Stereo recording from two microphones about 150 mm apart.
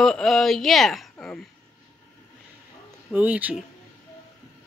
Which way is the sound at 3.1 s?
10° right (ahead or behind).